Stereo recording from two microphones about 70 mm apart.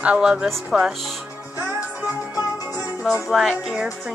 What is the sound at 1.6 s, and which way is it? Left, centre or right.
Music, centre.